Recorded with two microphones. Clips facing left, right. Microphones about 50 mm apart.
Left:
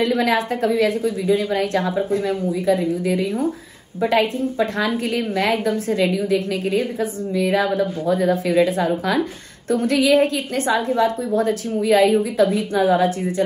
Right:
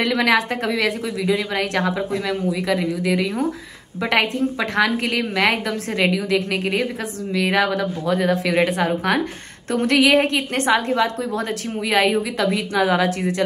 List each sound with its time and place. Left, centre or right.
0.0 s a woman's voice: right